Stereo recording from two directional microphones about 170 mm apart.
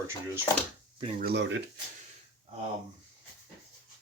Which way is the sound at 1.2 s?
85° right.